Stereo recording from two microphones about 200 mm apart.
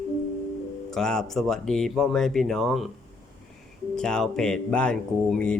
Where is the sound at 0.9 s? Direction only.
5° left (ahead or behind).